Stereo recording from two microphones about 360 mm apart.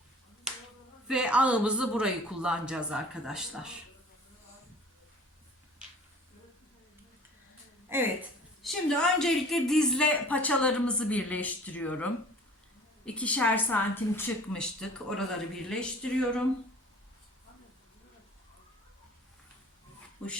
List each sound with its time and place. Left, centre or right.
1.0 s speech: centre
7.9 s a sound: centre
8.6 s speech: centre